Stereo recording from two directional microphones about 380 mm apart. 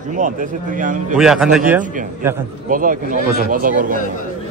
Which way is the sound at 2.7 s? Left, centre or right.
Right.